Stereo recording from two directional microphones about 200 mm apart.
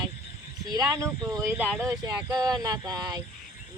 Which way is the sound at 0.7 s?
15° right (ahead or behind).